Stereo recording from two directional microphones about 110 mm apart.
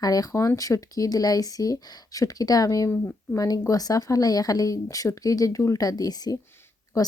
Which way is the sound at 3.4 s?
35° left (ahead or behind).